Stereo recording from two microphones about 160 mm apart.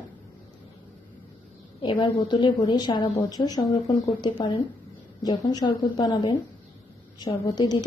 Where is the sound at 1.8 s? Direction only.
30° left (ahead or behind).